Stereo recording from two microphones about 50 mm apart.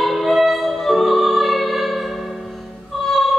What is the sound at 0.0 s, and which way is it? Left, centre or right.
Music, centre.